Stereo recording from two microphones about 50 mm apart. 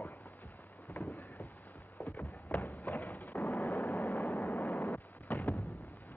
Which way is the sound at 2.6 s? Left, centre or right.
Left.